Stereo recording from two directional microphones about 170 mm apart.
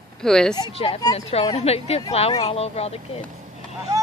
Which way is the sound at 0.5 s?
35° left (ahead or behind).